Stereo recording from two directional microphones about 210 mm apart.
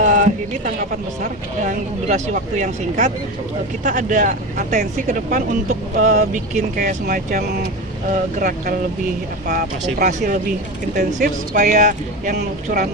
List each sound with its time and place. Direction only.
0.0 s speech: 35° right (ahead or behind)